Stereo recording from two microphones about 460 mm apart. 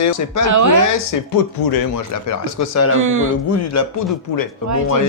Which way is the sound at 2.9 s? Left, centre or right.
Right.